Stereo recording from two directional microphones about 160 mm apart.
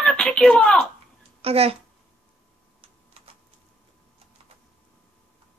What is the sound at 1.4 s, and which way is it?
Speech, 40° right (ahead or behind).